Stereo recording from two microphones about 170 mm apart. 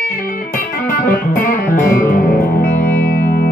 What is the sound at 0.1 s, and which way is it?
Music, 60° left (ahead or behind).